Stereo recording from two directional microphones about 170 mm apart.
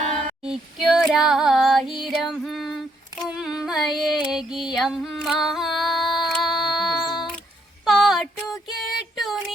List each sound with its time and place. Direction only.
0.0 s female singing: 45° right (ahead or behind)
0.4 s female singing: 5° right (ahead or behind)
3.2 s a sound: 5° right (ahead or behind)